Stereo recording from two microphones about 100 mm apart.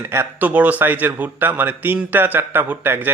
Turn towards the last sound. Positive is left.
turn(degrees=-20)  # may be behind; listen again after turning